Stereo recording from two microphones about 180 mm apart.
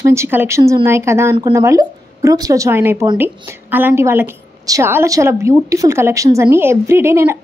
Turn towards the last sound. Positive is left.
turn(degrees=-15)  # may be behind; listen again after turning